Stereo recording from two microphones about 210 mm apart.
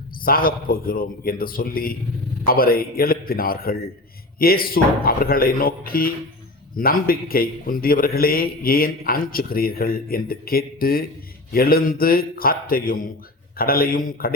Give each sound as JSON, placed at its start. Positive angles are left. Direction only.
{"t": 0.2, "sound": "a man's voice", "side_deg": 45}